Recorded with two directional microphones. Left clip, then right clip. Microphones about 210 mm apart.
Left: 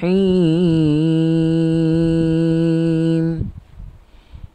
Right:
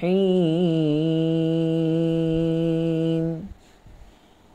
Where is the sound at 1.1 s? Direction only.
15° left (ahead or behind).